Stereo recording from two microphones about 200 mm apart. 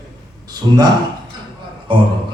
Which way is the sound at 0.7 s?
20° right (ahead or behind).